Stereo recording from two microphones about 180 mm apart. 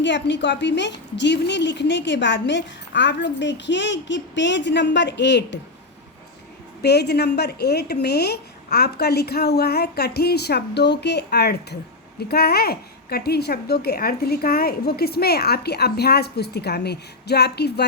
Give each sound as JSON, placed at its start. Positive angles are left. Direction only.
{"t": 0.0, "sound": "a woman's voice", "side_deg": 75}
{"t": 6.8, "sound": "a woman's voice", "side_deg": 65}